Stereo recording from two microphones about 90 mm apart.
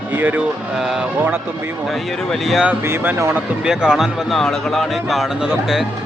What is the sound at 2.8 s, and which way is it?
Speech, 25° right (ahead or behind).